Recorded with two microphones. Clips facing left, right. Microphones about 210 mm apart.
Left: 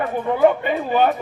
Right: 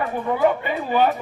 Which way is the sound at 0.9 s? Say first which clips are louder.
Left 1 dB; 45° left (ahead or behind).